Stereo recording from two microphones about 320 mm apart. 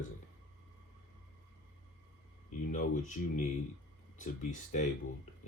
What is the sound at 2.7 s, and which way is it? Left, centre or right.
Speech, left.